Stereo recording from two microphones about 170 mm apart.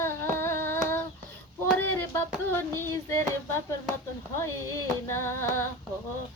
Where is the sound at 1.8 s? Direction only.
10° left (ahead or behind).